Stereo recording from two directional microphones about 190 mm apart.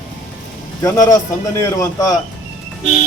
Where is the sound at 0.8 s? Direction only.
20° left (ahead or behind).